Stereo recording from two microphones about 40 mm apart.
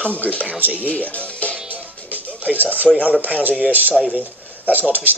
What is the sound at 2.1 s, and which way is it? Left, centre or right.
Music, right.